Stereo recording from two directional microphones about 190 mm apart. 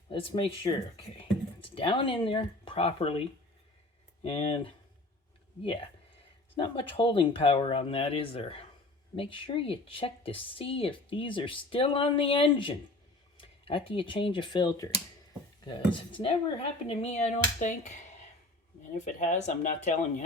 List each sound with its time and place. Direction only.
0.1 s a woman's voice: 30° left (ahead or behind)
13.3 s a sound: 30° left (ahead or behind)
13.9 s a woman's voice: 25° left (ahead or behind)
18.9 s speech: 40° left (ahead or behind)